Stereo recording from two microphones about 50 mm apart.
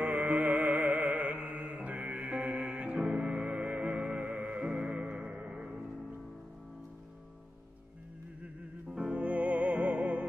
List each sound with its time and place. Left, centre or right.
0.2 s music: right; by 3.3 s centre
3.3 s music: right
8.8 s music: centre